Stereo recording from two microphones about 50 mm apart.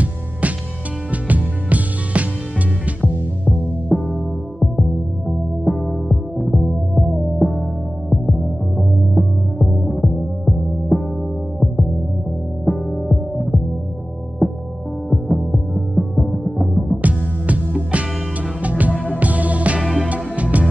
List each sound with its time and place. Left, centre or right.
1.1 s music: right
3.9 s music: centre
5.6 s music: centre
17.0 s music: right